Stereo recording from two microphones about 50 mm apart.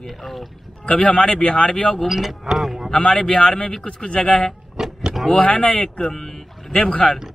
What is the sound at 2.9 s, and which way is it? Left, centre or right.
Speech, centre.